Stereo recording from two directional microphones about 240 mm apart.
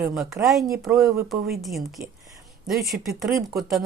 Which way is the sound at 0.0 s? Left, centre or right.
Centre.